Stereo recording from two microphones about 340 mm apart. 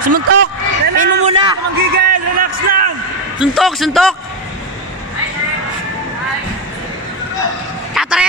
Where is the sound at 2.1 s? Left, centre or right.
Right.